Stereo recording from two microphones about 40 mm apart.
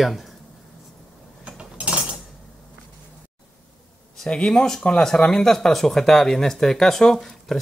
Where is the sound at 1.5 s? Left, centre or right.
Right.